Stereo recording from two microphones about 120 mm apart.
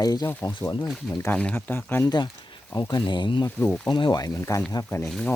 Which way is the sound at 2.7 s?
35° left (ahead or behind).